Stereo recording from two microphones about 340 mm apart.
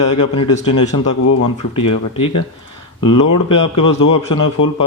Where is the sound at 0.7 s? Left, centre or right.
Left.